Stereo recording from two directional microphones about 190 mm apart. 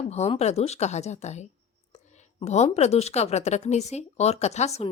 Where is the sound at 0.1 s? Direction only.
35° left (ahead or behind).